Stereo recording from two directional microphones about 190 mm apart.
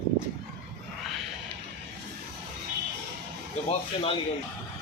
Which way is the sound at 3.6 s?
30° left (ahead or behind).